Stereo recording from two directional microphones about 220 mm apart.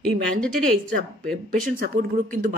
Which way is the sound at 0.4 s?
Centre (ahead or behind).